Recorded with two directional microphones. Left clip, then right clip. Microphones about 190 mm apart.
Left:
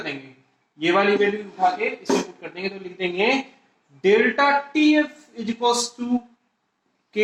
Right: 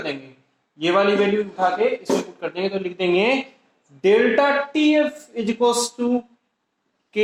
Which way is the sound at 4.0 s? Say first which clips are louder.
Right 2 dB; 20° right (ahead or behind).